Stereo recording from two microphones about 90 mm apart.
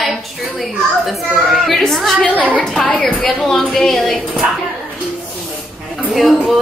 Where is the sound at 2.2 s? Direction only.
15° left (ahead or behind).